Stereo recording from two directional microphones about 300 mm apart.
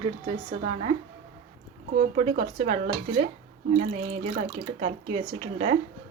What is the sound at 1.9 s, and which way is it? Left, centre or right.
Speech, right.